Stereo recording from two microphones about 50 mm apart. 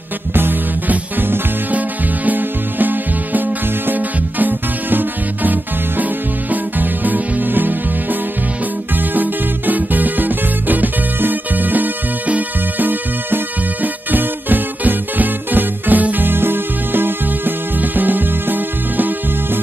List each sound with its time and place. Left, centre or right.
0.3 s music: right